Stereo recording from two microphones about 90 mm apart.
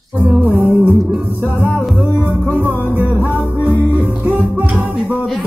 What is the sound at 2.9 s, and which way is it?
Music, 20° right (ahead or behind).